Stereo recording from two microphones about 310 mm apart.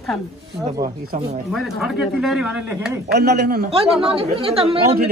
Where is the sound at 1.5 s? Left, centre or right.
Centre.